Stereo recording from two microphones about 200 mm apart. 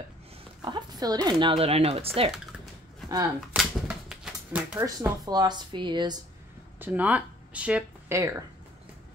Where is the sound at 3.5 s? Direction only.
5° right (ahead or behind); by 6.2 s 20° right (ahead or behind).